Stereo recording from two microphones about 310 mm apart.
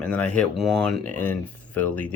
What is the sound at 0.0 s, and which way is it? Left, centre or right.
Speech, centre.